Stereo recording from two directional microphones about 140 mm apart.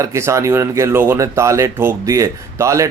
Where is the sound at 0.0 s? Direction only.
20° right (ahead or behind).